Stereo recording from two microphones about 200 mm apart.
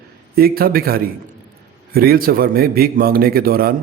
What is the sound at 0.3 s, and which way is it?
A man's voice, 50° right (ahead or behind).